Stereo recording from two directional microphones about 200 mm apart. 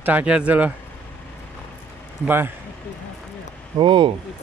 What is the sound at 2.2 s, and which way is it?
Speech, 10° right (ahead or behind).